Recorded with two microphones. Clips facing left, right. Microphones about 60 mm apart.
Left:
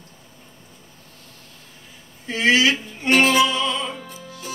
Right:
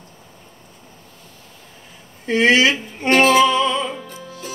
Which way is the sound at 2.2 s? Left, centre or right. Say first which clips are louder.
Right 3 dB; right.